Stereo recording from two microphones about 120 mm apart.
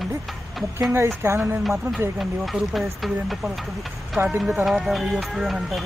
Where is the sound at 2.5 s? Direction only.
Centre (ahead or behind).